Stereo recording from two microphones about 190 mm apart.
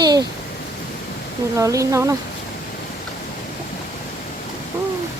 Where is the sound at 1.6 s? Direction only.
15° right (ahead or behind).